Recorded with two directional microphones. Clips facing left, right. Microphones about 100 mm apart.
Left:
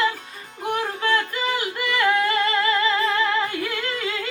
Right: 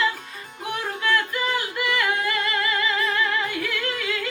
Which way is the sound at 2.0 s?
30° left (ahead or behind).